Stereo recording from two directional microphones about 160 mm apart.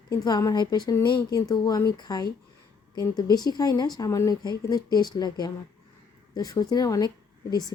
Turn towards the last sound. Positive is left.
turn(degrees=25)  # may be behind; listen again after turning